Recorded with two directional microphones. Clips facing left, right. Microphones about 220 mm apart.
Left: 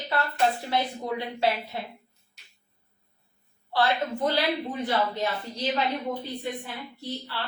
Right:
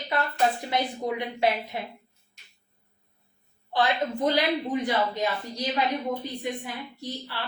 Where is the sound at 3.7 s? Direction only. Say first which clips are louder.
Even; 15° right (ahead or behind).